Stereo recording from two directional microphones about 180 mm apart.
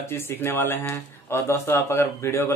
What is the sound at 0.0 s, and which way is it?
Speech, 15° left (ahead or behind).